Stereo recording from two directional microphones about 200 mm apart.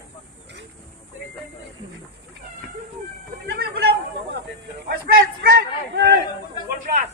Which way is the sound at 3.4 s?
50° right (ahead or behind).